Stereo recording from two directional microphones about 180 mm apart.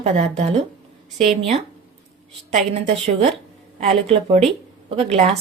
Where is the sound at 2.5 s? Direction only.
35° right (ahead or behind).